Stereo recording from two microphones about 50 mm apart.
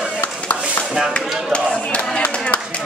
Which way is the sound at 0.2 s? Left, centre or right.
Left.